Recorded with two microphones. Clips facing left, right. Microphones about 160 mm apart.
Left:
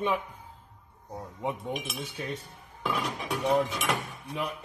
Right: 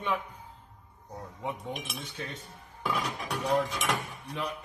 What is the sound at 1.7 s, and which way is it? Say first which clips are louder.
Speech: left 4 dB; 5° left (ahead or behind).